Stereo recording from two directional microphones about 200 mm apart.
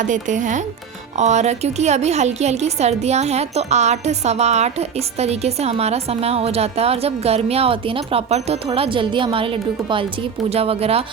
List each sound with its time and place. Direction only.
0.0 s a woman's voice: 40° right (ahead or behind)